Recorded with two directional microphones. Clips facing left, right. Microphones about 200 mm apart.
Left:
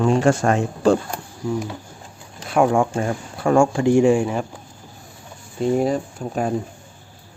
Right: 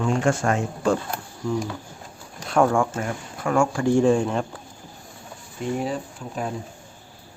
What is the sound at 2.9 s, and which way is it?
Speech, 30° left (ahead or behind).